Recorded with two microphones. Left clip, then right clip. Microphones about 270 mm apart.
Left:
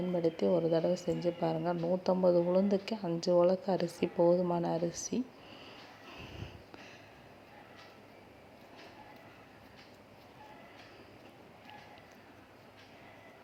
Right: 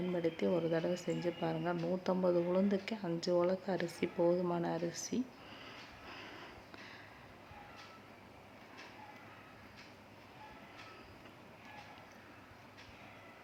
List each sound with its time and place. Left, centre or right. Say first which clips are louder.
0.2 s a woman's voice: left 5 dB; centre
5.6 s vehicle: even; centre